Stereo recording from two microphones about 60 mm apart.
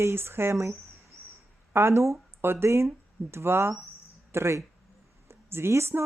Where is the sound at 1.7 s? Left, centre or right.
Right.